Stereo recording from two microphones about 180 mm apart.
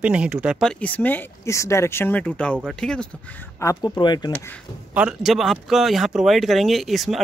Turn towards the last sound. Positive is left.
turn(degrees=0)  # may be behind; listen again after turning